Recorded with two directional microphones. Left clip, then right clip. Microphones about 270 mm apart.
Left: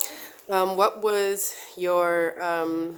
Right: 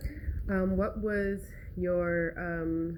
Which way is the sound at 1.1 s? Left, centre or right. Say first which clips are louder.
Left 8 dB; left.